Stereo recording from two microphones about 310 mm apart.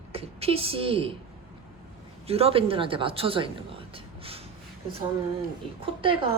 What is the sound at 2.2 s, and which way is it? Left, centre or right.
Speech, centre.